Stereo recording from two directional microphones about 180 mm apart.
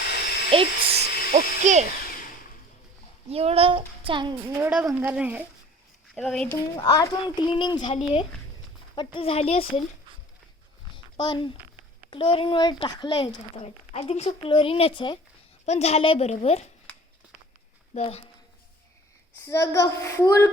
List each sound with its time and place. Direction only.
0.5 s speech: 30° right (ahead or behind)
1.3 s speech: 40° right (ahead or behind)
3.2 s speech: 35° right (ahead or behind)
4.4 s speech: 15° right (ahead or behind)
6.1 s speech: 5° left (ahead or behind)
6.5 s a woman's voice: 20° left (ahead or behind)
10.9 s a sound: 25° left (ahead or behind)
12.1 s speech: 30° left (ahead or behind)
13.9 s a woman's voice: 35° left (ahead or behind)
15.6 s a woman's voice: 40° left (ahead or behind)
17.9 s a woman's voice: 35° left (ahead or behind)
19.5 s a child's voice: 15° left (ahead or behind)